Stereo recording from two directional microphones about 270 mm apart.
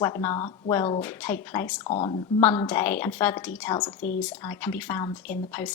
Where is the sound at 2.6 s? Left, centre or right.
Centre.